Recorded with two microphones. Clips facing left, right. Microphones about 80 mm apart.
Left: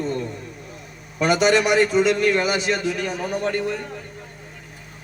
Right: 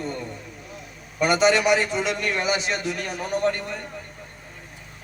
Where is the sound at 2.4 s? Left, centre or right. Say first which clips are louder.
Left 2 dB; left.